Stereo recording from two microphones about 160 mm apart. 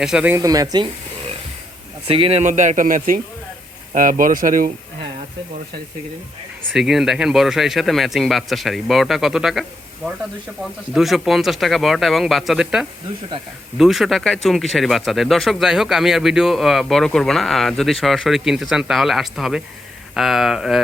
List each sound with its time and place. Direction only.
0.0 s speech: 5° right (ahead or behind)
0.3 s speech: 20° right (ahead or behind)
2.0 s speech: 35° right (ahead or behind)
2.4 s speech: 50° right (ahead or behind)
6.7 s speech: 5° right (ahead or behind)
10.9 s speech: centre (ahead or behind)